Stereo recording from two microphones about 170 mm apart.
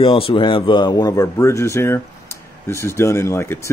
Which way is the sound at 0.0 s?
30° left (ahead or behind).